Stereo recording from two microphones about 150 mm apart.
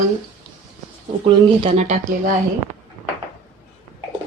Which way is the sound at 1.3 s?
40° right (ahead or behind).